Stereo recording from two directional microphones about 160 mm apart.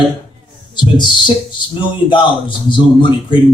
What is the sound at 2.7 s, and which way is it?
Speech, 30° left (ahead or behind).